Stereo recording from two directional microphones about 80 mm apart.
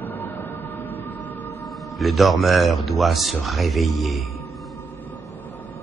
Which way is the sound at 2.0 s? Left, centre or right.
Centre.